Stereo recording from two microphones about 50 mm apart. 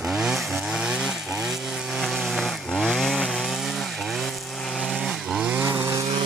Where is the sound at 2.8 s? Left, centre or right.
Centre.